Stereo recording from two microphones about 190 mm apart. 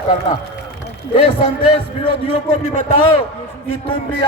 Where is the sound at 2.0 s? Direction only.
30° left (ahead or behind).